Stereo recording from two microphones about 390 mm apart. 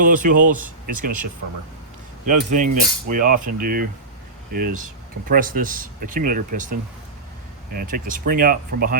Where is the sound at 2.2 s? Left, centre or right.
Centre.